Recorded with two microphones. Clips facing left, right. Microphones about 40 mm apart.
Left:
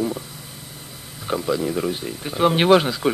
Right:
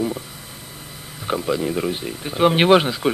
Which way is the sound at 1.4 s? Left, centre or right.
Centre.